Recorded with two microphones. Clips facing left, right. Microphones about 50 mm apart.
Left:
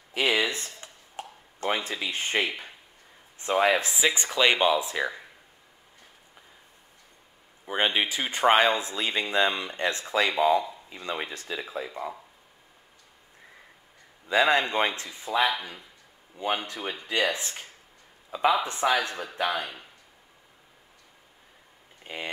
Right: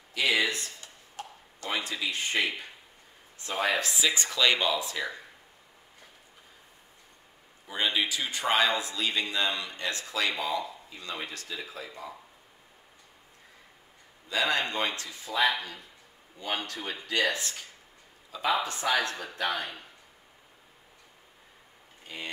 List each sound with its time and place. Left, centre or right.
0.1 s a sound: left
3.7 s speech: left
7.6 s speech: left
14.3 s speech: left
22.0 s speech: left